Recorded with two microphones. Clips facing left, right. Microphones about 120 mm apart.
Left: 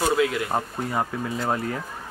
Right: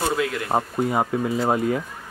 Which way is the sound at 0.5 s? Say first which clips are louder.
Right 5 dB; 20° right (ahead or behind).